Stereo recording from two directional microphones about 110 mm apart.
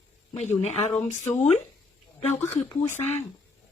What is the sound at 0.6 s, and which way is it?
Speech, 90° left.